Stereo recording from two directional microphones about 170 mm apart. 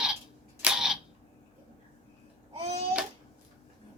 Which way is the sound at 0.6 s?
5° right (ahead or behind).